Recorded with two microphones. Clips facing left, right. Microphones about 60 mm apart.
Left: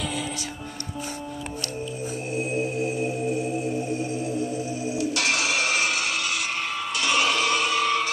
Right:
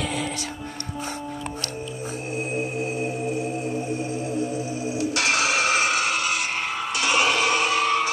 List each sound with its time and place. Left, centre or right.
2.3 s music: right